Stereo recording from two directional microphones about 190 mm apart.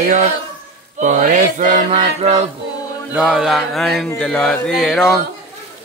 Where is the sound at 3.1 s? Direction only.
5° right (ahead or behind).